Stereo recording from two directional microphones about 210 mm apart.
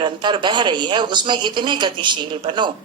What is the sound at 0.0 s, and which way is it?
A woman's voice, 20° right (ahead or behind).